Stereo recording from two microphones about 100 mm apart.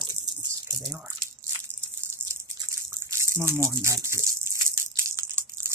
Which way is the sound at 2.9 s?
30° right (ahead or behind).